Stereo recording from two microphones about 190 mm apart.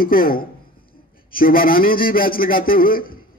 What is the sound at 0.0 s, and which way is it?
A man's voice, 50° left (ahead or behind).